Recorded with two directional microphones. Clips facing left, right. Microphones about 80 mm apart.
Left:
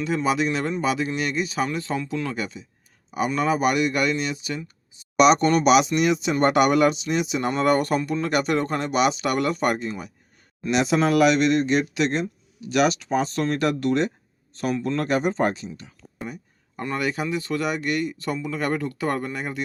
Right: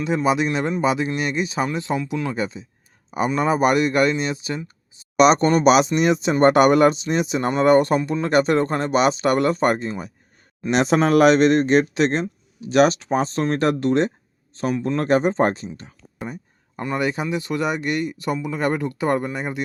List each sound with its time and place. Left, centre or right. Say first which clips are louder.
0.0 s speech: right 3 dB; centre
2.3 s speech: right 4 dB; right
7.5 s speech: right 6 dB; right
15.0 s a sound: right 5 dB; right
17.0 s speech: right 2 dB; right